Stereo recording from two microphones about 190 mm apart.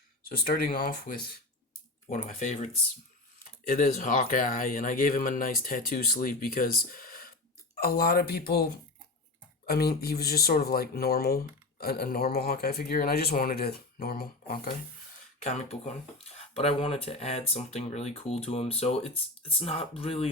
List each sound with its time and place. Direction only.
0.3 s speech: 50° left (ahead or behind)
2.0 s speech: 40° left (ahead or behind)
3.7 s speech: 45° left (ahead or behind)
15.4 s speech: 35° left (ahead or behind)